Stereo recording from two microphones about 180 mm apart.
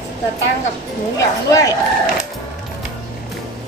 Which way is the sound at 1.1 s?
20° left (ahead or behind).